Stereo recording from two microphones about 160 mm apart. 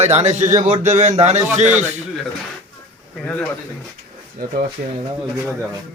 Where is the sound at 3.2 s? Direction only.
10° left (ahead or behind).